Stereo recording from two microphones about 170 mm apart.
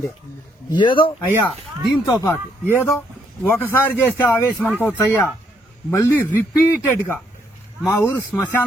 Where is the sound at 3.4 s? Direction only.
15° left (ahead or behind).